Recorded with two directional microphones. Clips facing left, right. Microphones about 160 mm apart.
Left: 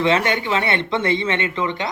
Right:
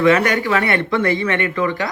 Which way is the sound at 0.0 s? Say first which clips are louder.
Right 4 dB; 25° left (ahead or behind).